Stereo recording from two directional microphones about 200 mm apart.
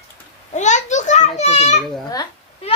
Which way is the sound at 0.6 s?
35° left (ahead or behind).